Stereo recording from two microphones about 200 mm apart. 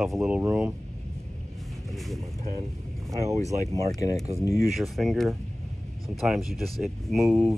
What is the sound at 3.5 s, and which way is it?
Speech, 15° left (ahead or behind).